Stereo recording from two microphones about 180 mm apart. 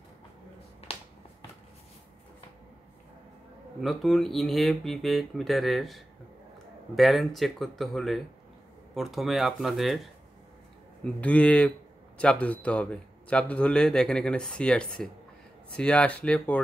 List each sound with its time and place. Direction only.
0.8 s finger snapping: 35° left (ahead or behind)
3.8 s a man's voice: centre (ahead or behind)
11.1 s a man's voice: 5° left (ahead or behind)